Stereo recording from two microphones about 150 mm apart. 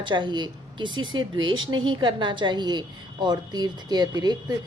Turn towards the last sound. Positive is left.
turn(degrees=-30)  # may be behind; listen again after turning